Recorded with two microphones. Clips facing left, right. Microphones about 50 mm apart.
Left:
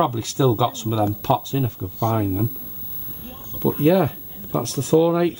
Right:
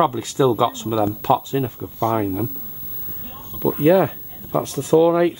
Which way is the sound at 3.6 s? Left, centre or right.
Centre.